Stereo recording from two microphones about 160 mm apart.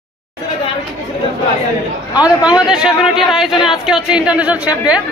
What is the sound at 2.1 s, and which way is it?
A man's voice, 5° right (ahead or behind).